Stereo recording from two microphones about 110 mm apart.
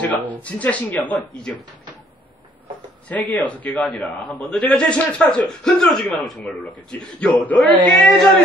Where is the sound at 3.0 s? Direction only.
15° left (ahead or behind).